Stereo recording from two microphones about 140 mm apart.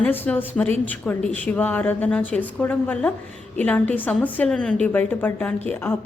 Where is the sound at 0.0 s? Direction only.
10° left (ahead or behind).